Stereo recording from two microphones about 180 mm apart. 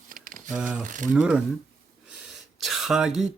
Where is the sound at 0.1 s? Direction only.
50° right (ahead or behind).